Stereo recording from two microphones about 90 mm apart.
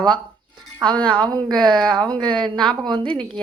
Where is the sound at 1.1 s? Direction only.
60° right (ahead or behind).